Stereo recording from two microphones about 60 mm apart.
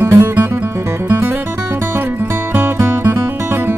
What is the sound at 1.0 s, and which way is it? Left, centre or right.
Music, right.